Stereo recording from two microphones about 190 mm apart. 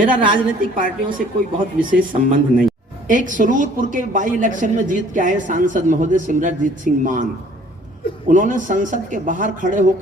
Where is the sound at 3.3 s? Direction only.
45° right (ahead or behind).